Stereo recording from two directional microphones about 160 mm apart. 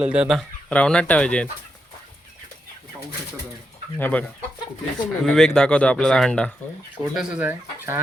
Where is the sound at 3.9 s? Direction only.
10° left (ahead or behind).